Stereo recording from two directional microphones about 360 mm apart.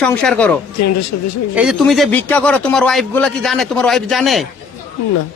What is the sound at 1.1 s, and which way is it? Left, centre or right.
Speech, left.